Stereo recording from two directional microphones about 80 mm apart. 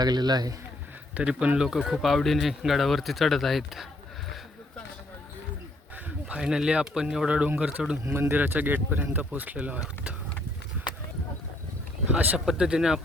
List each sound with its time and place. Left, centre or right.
0.0 s speech: right
1.1 s speech: centre
6.1 s speech: centre
8.0 s speech: right; by 10.2 s centre
12.0 s speech: centre
12.5 s speech: centre